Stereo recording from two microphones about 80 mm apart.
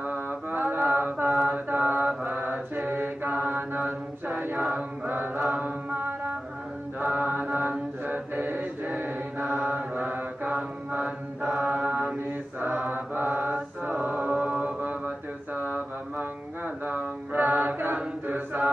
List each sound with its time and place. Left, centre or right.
0.0 s mantra: right
4.3 s a capella: right
4.7 s chant: right
7.0 s mantra: right
13.5 s mantra: centre
17.9 s a capella: right